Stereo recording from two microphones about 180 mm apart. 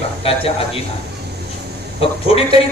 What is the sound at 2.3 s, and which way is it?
Speech, 35° left (ahead or behind).